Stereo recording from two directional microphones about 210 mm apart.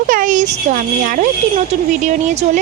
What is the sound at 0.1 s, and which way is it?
A woman's voice, 40° right (ahead or behind).